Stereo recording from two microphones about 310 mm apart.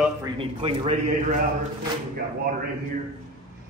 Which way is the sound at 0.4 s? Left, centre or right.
Centre.